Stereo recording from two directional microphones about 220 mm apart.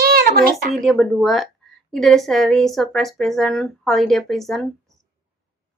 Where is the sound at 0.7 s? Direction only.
Centre (ahead or behind).